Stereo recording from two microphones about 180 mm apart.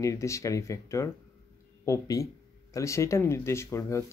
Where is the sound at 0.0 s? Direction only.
15° left (ahead or behind).